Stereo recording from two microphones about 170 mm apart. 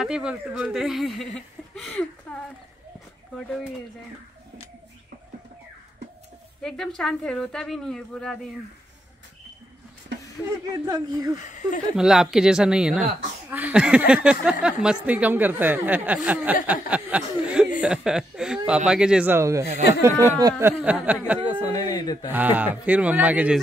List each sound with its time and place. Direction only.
0.0 s a woman's voice: 5° right (ahead or behind)
7.0 s a woman's voice: centre (ahead or behind)
10.1 s a sound: 90° right
10.7 s speech: 20° right (ahead or behind)
11.3 s speech: 45° left (ahead or behind)
12.0 s a woman's voice: 5° right (ahead or behind)
21.5 s speech: 20° left (ahead or behind)
22.3 s speech: 10° right (ahead or behind)